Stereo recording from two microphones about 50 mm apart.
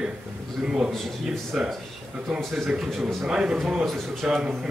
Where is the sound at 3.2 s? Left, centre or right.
Centre.